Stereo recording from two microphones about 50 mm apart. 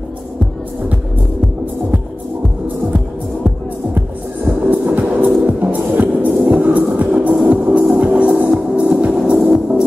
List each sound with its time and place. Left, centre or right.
4.5 s music: right; by 9.8 s centre